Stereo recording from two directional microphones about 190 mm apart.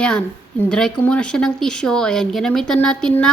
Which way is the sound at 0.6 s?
5° left (ahead or behind).